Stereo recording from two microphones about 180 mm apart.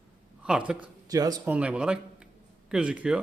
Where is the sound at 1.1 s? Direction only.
20° right (ahead or behind).